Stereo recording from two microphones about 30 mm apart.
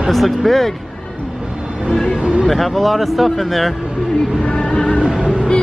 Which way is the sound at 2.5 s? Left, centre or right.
Centre.